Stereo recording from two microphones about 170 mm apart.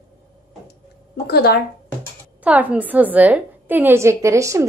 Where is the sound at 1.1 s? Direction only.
70° left (ahead or behind).